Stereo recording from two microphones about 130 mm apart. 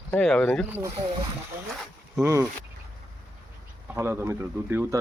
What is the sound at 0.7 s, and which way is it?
Speech, 15° right (ahead or behind).